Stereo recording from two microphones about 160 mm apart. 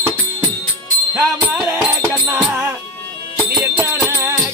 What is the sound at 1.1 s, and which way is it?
Music, 15° right (ahead or behind).